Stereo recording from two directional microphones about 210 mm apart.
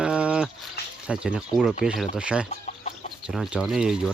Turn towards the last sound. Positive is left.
turn(degrees=-5)  # may be behind; listen again after turning